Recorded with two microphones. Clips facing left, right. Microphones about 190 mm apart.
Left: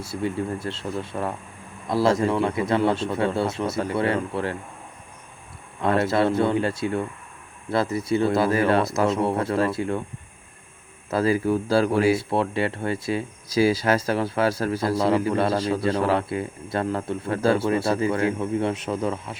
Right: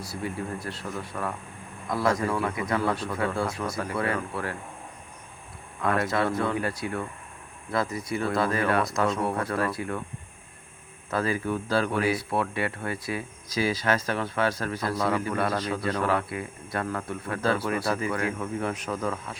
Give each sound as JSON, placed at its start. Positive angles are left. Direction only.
{"t": 0.0, "sound": "speech", "side_deg": 25}
{"t": 5.8, "sound": "speech", "side_deg": 30}
{"t": 11.1, "sound": "speech", "side_deg": 35}